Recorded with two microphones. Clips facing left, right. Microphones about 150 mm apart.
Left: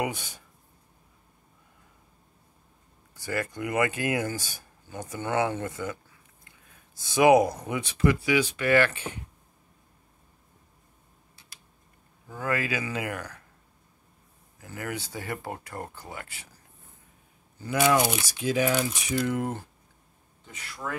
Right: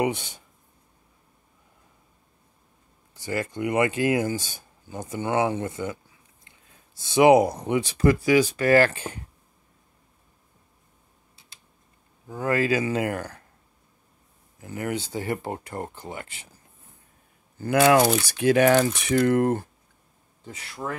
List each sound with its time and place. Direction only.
0.0 s speech: 25° right (ahead or behind)
3.2 s speech: 25° right (ahead or behind)
12.3 s speech: 25° right (ahead or behind)
14.6 s speech: 20° right (ahead or behind)
17.6 s speech: 55° right (ahead or behind)
20.4 s speech: 30° right (ahead or behind)